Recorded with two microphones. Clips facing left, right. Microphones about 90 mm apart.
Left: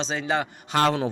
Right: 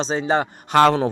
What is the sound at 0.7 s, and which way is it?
Speech, 85° right.